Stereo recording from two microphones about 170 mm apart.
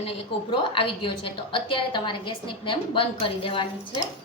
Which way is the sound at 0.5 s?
30° left (ahead or behind).